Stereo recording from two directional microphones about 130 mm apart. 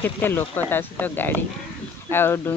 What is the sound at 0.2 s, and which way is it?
Speech, 15° left (ahead or behind).